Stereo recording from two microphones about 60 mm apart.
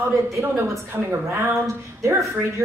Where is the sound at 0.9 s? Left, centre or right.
Right.